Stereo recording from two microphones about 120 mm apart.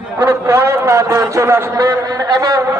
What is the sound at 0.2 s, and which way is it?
A man's voice, 20° right (ahead or behind).